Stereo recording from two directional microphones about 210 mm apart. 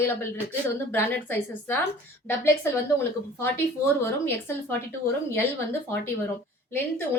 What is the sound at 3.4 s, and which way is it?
A woman's voice, 10° left (ahead or behind).